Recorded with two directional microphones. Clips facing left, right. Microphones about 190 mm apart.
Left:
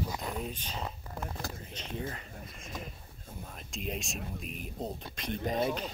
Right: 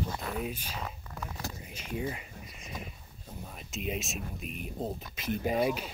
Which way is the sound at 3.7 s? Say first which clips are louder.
Right 2 dB; 5° right (ahead or behind).